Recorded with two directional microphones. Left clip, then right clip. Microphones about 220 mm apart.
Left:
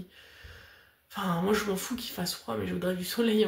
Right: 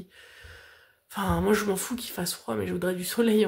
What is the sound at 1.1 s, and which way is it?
Speech, 45° right (ahead or behind).